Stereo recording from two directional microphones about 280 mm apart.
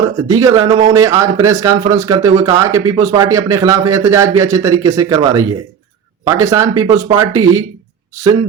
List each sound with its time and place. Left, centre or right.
0.3 s speech: centre